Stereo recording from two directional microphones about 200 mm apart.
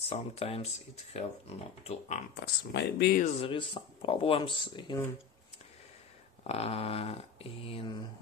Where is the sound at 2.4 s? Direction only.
55° left (ahead or behind).